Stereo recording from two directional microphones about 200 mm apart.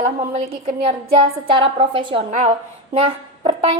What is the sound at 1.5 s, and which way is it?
A woman's voice, 25° right (ahead or behind).